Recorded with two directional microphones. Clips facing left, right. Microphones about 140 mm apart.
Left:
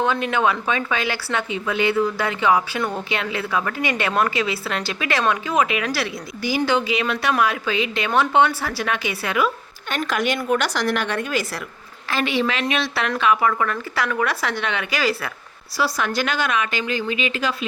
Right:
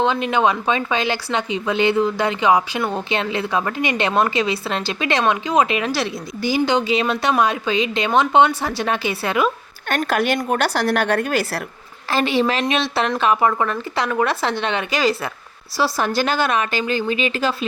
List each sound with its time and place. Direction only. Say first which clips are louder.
0.0 s a woman's voice: right 2 dB; 20° right (ahead or behind)
9.9 s speech: right 3 dB; 45° right (ahead or behind)
10.9 s a woman's voice: right 4 dB; 50° right (ahead or behind)
12.1 s a woman's voice: right 4 dB; 35° right (ahead or behind)